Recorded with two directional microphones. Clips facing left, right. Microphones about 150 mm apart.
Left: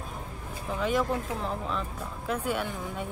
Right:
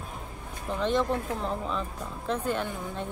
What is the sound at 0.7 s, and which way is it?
A woman's voice, 5° left (ahead or behind).